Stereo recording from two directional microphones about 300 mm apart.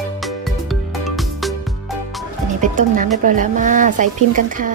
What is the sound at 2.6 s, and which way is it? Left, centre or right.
Speech, right.